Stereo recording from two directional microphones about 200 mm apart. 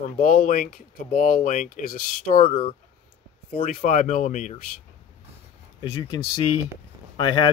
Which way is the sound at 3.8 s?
40° left (ahead or behind).